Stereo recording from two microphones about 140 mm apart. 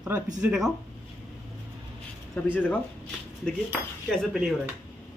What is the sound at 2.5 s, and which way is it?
Speech, 10° left (ahead or behind).